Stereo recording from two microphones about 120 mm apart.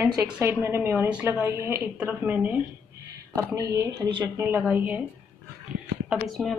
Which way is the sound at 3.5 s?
30° right (ahead or behind).